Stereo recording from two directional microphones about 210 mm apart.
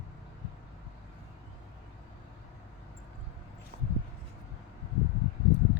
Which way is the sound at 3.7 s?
30° right (ahead or behind).